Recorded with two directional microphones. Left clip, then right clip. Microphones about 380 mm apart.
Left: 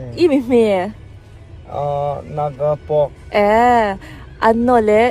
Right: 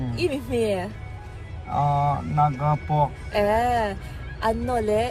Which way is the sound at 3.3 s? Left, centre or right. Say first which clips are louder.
Left 10 dB; left.